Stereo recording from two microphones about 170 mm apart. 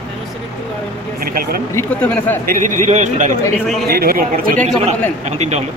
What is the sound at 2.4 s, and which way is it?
Speech, 50° right (ahead or behind).